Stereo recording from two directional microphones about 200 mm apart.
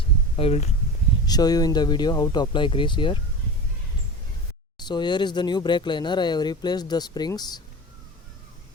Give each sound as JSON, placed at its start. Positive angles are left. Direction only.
{"t": 0.3, "sound": "speech", "side_deg": 30}
{"t": 1.3, "sound": "speech", "side_deg": 20}
{"t": 4.8, "sound": "speech", "side_deg": 20}